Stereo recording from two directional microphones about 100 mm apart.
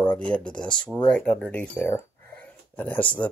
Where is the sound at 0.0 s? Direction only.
10° left (ahead or behind).